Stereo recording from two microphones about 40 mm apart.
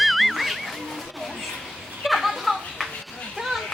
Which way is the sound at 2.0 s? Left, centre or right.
Centre.